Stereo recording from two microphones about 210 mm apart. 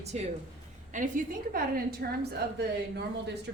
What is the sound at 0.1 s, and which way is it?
A woman's voice, 30° right (ahead or behind).